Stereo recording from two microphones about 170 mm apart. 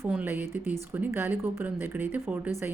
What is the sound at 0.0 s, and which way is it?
Speech, 10° right (ahead or behind).